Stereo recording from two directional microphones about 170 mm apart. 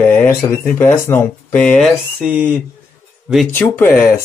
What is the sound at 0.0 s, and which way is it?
Speech, 10° left (ahead or behind).